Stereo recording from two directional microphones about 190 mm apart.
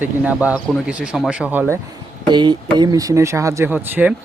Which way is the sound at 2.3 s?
25° right (ahead or behind).